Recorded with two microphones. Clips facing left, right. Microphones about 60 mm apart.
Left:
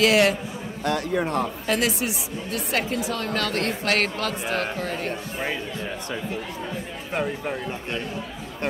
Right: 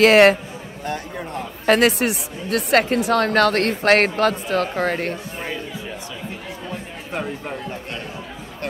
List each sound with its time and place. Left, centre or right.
0.0 s speech: right
0.8 s a sound: left
1.7 s speech: right
7.1 s speech: centre